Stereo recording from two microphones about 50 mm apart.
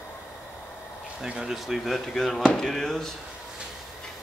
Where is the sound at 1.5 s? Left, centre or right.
Centre.